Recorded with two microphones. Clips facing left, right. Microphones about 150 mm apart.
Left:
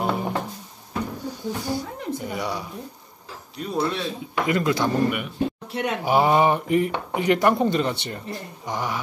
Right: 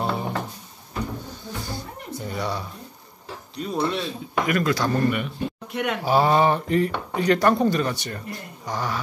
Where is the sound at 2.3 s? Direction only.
15° left (ahead or behind).